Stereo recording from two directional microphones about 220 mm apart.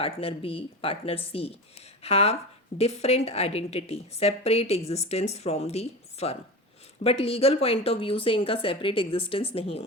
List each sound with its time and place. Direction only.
0.0 s a woman's voice: 25° left (ahead or behind)